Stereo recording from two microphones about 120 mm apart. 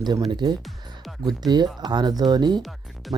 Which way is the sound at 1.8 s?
35° right (ahead or behind).